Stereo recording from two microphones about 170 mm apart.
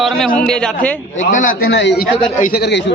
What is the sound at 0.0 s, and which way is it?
Speech, centre (ahead or behind).